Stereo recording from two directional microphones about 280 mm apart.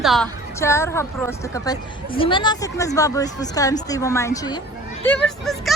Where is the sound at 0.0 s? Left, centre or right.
Centre.